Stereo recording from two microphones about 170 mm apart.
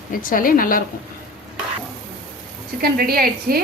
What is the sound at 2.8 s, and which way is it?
Speech, 60° right (ahead or behind).